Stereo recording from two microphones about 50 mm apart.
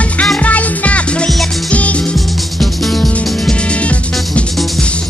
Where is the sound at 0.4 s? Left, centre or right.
Left.